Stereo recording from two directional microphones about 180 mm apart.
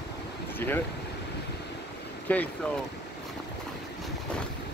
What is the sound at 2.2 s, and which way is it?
Speech, 10° left (ahead or behind).